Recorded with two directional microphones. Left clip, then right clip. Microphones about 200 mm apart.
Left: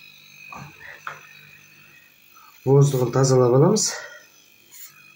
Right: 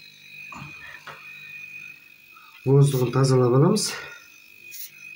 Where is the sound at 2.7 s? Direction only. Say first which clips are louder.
Left 3 dB; 25° right (ahead or behind).